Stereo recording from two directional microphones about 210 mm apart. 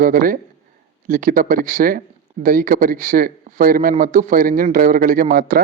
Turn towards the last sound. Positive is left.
turn(degrees=-40)  # may be behind; listen again after turning